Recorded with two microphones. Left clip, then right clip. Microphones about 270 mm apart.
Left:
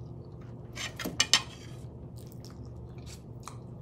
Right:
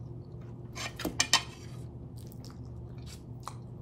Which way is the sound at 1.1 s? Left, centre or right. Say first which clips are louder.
Left 2 dB; right.